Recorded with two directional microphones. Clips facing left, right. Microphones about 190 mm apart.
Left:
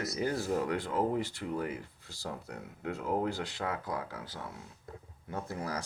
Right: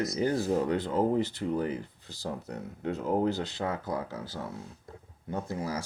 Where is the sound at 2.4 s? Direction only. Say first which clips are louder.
Right 5 dB; 35° right (ahead or behind).